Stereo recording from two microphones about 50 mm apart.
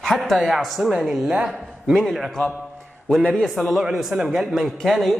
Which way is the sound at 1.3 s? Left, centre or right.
Centre.